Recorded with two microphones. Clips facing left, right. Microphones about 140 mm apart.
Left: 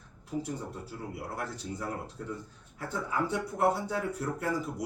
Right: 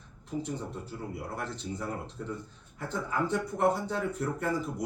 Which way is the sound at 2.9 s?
5° left (ahead or behind).